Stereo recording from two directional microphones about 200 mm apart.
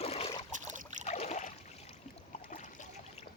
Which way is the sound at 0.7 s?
35° right (ahead or behind).